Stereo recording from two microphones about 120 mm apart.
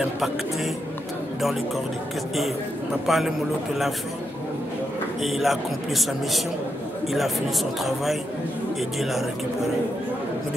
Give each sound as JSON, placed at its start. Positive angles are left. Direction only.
{"t": 3.1, "sound": "a man's voice", "side_deg": 0}
{"t": 5.2, "sound": "a man's voice", "side_deg": 0}